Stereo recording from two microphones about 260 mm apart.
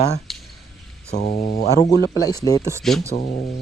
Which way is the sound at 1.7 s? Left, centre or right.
Centre.